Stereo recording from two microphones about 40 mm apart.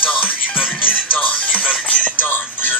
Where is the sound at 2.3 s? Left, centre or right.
Left.